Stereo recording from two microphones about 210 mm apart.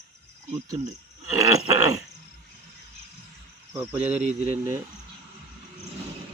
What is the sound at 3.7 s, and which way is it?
Speech, 15° right (ahead or behind).